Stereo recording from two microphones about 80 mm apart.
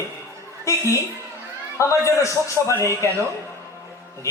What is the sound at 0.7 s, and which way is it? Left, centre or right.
A man's voice, left.